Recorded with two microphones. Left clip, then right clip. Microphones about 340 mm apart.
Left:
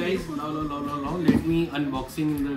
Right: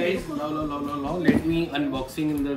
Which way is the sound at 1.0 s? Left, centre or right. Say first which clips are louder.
Right 1 dB; centre.